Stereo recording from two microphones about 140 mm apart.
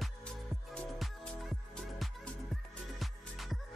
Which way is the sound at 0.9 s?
Centre (ahead or behind).